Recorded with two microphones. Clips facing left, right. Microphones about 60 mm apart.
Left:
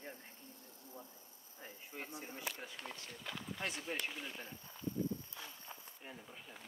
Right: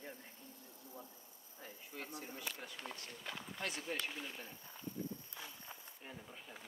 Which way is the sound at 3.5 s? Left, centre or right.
Left.